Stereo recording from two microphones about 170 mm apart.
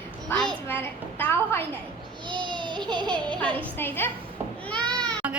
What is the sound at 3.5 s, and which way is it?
Speech, 10° left (ahead or behind).